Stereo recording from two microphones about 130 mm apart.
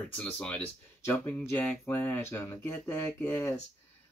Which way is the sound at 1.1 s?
15° left (ahead or behind).